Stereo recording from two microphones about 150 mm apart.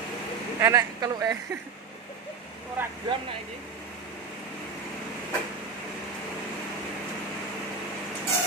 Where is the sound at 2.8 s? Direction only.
10° right (ahead or behind).